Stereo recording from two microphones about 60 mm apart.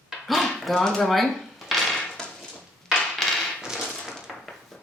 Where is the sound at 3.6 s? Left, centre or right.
Centre.